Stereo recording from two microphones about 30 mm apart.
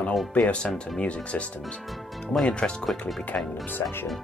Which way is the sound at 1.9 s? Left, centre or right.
Centre.